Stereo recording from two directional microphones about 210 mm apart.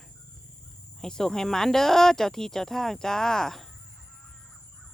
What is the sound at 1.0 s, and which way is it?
Speech, 5° left (ahead or behind).